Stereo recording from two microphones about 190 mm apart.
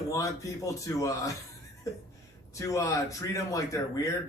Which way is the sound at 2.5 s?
15° left (ahead or behind).